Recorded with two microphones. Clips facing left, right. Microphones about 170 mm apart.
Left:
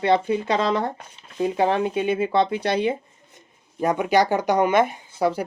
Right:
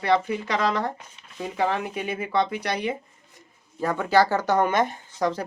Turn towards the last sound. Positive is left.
turn(degrees=10)  # may be behind; listen again after turning